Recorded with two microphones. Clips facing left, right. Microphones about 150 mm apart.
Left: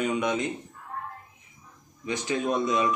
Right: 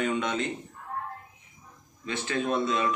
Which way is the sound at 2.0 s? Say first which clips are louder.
Left 2 dB; 15° left (ahead or behind).